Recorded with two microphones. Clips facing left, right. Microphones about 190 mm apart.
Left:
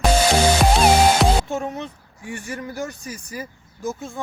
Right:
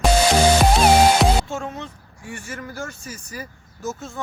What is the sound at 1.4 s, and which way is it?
Speech, 15° left (ahead or behind).